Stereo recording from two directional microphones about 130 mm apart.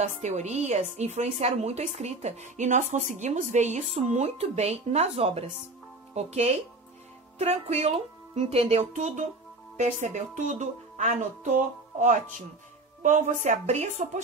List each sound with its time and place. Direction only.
0.0 s a woman's voice: 65° right (ahead or behind)
9.8 s speech: 70° right (ahead or behind)